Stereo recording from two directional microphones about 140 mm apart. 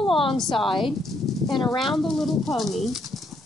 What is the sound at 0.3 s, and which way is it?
Speech, centre (ahead or behind).